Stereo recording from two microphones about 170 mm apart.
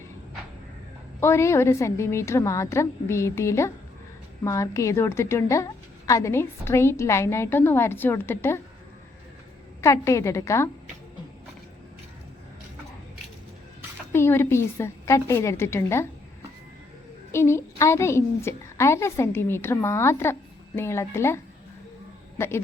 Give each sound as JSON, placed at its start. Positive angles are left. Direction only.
{"t": 1.2, "sound": "a woman's voice", "side_deg": 15}
{"t": 9.8, "sound": "a woman's voice", "side_deg": 15}
{"t": 14.1, "sound": "a woman's voice", "side_deg": 15}
{"t": 17.3, "sound": "a woman's voice", "side_deg": 15}